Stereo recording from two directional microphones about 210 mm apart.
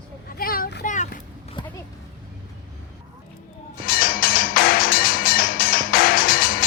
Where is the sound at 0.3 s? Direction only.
45° left (ahead or behind).